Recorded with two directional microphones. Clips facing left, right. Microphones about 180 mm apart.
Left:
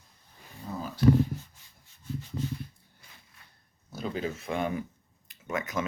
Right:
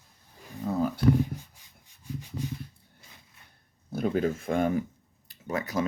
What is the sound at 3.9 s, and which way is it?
Speech, 55° right (ahead or behind).